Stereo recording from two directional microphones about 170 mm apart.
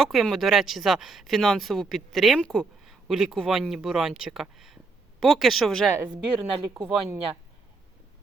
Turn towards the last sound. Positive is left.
turn(degrees=-20)  # may be behind; listen again after turning